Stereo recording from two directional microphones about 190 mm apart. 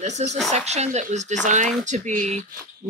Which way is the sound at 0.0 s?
35° right (ahead or behind).